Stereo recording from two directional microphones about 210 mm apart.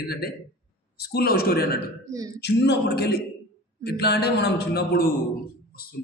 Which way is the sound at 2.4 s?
50° left (ahead or behind).